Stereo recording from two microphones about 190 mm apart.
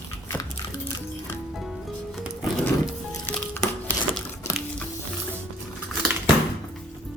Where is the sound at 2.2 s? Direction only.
5° right (ahead or behind).